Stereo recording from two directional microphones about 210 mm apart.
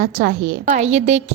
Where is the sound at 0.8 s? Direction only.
35° right (ahead or behind).